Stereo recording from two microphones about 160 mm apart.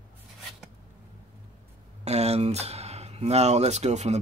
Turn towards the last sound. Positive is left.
turn(degrees=-45)  # may be behind; listen again after turning